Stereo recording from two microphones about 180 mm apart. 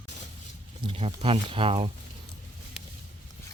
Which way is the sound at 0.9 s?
35° right (ahead or behind).